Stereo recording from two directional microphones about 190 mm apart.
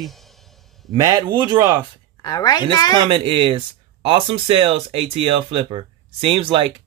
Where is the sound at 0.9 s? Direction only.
20° right (ahead or behind).